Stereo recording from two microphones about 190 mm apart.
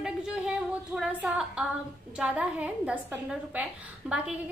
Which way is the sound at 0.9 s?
5° right (ahead or behind).